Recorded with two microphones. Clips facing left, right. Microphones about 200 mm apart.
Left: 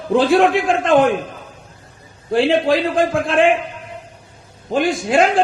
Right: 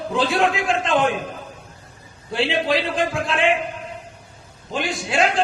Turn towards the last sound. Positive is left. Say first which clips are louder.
# left 6 dB
turn(degrees=50)  # may be behind; listen again after turning